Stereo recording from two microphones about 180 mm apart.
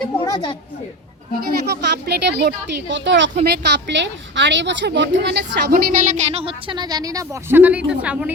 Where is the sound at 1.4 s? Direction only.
60° right (ahead or behind); by 3.3 s 85° right.